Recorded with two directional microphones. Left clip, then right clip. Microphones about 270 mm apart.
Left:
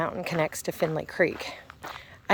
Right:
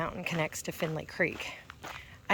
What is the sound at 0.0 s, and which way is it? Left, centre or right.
Speech, left.